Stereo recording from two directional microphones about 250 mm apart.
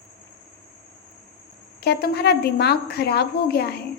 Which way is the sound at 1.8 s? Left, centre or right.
Left.